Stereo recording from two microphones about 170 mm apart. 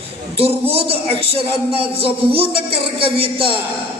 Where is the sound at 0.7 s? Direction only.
35° right (ahead or behind).